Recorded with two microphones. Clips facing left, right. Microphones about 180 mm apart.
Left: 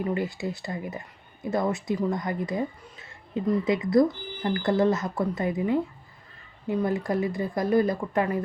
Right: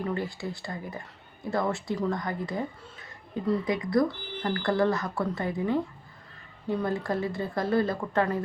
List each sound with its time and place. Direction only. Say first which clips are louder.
0.0 s a woman's voice: left 3 dB; 15° left (ahead or behind)